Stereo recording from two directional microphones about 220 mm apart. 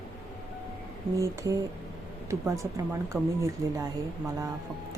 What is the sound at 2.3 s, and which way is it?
Speech, 15° right (ahead or behind).